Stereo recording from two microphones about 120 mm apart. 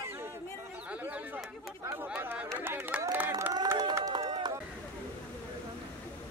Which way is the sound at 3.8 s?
30° right (ahead or behind).